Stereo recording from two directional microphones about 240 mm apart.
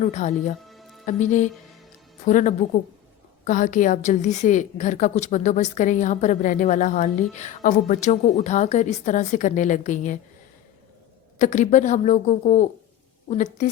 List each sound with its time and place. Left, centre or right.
0.0 s a woman's voice: left
0.7 s music: centre
1.0 s a woman's voice: left
11.3 s a woman's voice: left